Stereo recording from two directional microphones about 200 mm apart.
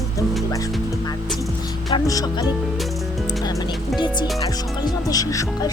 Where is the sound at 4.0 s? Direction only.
20° left (ahead or behind).